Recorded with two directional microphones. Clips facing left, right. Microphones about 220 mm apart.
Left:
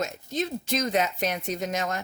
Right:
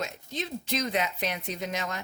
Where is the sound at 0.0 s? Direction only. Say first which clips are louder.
Left 5 dB; 45° left (ahead or behind).